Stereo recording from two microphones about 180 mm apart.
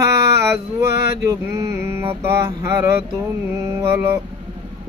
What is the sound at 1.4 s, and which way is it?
Mantra, 15° right (ahead or behind).